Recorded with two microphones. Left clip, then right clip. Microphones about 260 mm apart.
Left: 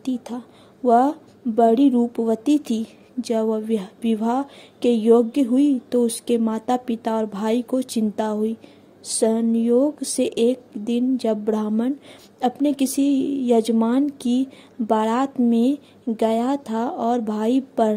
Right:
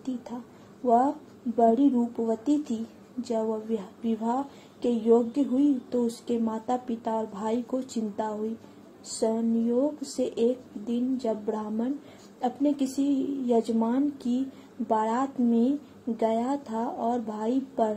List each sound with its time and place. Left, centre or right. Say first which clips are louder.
0.0 s speech: left 7 dB; left